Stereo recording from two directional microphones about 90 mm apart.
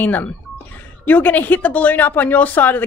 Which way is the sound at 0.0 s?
20° left (ahead or behind).